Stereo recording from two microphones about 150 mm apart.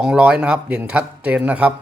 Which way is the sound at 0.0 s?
5° right (ahead or behind).